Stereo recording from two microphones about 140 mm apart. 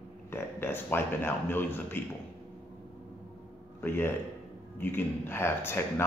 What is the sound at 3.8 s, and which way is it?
Speech, 15° left (ahead or behind).